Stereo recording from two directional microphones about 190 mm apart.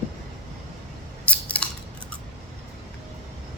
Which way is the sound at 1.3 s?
5° left (ahead or behind).